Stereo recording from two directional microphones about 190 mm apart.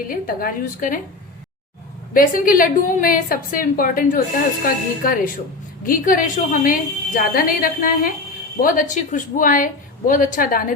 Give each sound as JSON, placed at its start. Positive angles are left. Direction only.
{"t": 0.1, "sound": "a woman's voice", "side_deg": 50}
{"t": 2.1, "sound": "a woman's voice", "side_deg": 45}